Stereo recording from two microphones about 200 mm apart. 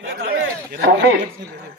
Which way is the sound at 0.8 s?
65° right (ahead or behind).